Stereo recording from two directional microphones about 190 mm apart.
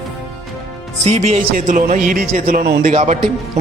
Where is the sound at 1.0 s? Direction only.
35° right (ahead or behind).